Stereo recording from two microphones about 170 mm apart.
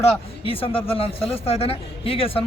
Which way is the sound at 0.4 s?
35° left (ahead or behind).